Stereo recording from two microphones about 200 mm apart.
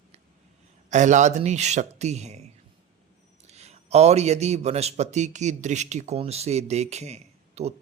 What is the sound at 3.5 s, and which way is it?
Speech, 35° right (ahead or behind).